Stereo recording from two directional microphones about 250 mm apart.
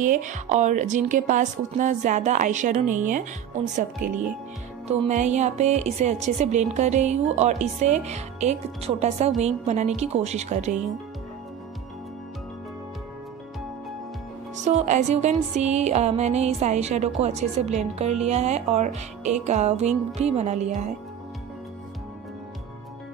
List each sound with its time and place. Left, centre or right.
0.0 s speech: right
14.6 s speech: right